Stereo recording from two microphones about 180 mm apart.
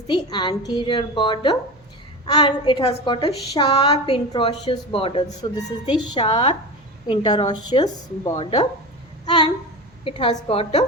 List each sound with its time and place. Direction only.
0.1 s a woman's voice: 25° left (ahead or behind)
9.2 s a sound: 25° left (ahead or behind)
10.0 s a woman's voice: 30° left (ahead or behind)